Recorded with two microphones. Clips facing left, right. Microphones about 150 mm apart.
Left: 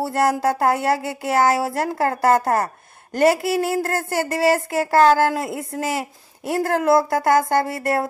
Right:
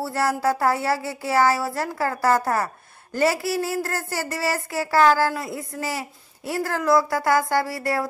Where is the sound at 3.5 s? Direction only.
55° left (ahead or behind).